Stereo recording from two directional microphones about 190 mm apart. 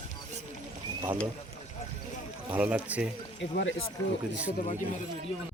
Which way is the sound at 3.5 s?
75° left (ahead or behind).